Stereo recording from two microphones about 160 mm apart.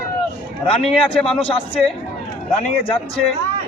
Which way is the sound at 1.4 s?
35° left (ahead or behind).